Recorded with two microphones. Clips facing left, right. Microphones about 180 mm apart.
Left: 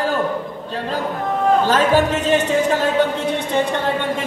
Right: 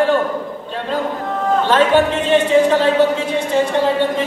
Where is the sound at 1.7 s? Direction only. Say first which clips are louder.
Right 2 dB; 40° left (ahead or behind).